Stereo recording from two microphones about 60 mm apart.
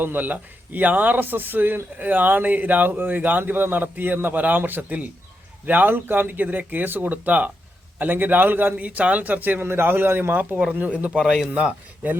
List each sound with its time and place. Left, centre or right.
0.0 s a man's voice: right
11.2 s speech: centre
11.5 s a man's voice: right